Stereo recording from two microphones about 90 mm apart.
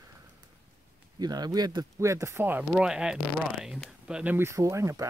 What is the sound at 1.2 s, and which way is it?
Speech, 50° right (ahead or behind).